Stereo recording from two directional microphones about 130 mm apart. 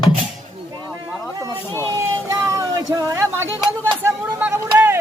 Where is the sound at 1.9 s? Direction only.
25° right (ahead or behind).